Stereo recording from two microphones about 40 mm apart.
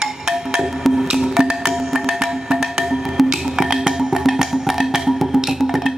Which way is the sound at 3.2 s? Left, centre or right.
Centre.